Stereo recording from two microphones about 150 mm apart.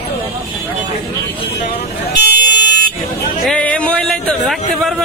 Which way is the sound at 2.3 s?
65° right (ahead or behind).